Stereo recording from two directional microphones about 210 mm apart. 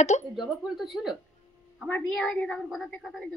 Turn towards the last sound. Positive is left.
turn(degrees=0)  # may be behind; listen again after turning